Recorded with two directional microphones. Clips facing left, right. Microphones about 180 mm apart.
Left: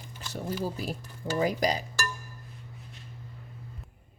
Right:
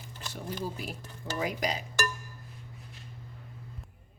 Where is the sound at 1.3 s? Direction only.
35° left (ahead or behind).